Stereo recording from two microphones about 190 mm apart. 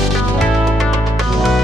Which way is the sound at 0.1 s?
Centre (ahead or behind).